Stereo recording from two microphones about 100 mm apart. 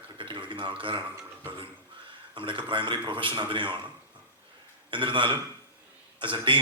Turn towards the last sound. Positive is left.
turn(degrees=-55)  # may be behind; listen again after turning